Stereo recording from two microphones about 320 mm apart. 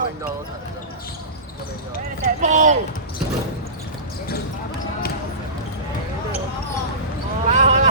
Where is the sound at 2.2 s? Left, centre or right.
Right.